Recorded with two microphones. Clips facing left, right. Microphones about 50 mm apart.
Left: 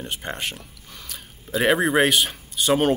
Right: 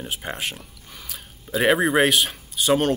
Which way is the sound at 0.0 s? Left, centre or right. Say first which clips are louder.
Even; centre.